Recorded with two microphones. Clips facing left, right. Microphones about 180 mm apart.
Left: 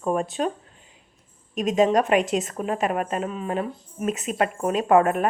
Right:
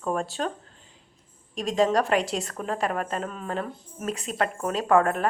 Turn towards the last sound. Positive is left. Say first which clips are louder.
# left 3 dB
turn(degrees=20)  # may be behind; listen again after turning